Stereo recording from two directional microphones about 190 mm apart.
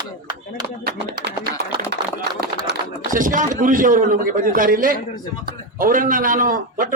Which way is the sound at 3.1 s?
45° right (ahead or behind).